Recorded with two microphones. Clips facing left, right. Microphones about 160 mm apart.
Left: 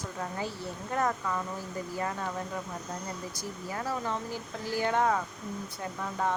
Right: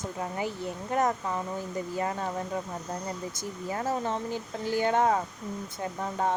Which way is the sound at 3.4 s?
25° right (ahead or behind).